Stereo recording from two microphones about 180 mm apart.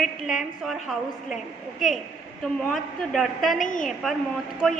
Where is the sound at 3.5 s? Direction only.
45° left (ahead or behind).